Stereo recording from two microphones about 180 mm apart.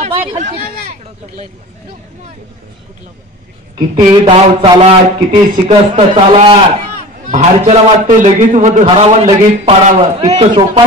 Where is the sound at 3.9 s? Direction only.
25° right (ahead or behind).